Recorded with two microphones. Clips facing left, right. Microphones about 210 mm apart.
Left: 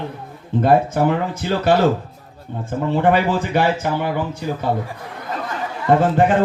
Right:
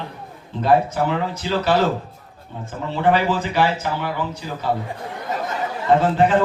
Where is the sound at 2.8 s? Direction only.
50° left (ahead or behind).